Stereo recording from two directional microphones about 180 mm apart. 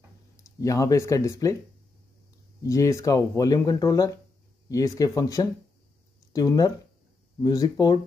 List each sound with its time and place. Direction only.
0.4 s speech: 15° left (ahead or behind)
2.6 s speech: 15° left (ahead or behind)